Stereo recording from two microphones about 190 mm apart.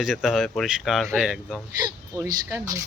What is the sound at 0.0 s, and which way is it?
Speech, centre (ahead or behind).